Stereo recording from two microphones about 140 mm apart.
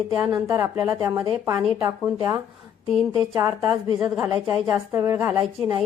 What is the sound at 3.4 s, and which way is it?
Speech, 20° right (ahead or behind).